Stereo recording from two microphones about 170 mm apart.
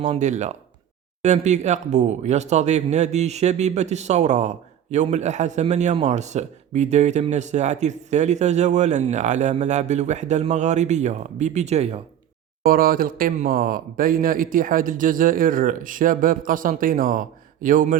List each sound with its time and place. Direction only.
0.0 s a man's voice: 45° right (ahead or behind)
12.6 s a man's voice: 55° right (ahead or behind)